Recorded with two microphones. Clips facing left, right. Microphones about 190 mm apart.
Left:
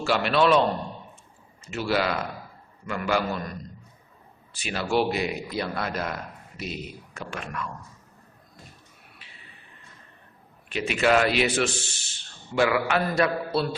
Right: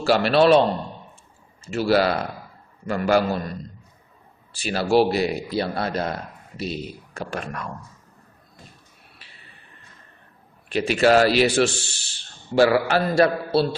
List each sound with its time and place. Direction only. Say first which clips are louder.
0.0 s a man's voice: right 5 dB; 35° right (ahead or behind)
1.6 s a man's voice: right 6 dB; 35° right (ahead or behind)
10.7 s a man's voice: right 5 dB; 35° right (ahead or behind)